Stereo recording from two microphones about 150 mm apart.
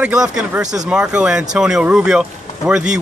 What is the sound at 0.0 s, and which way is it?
Speech, 5° right (ahead or behind).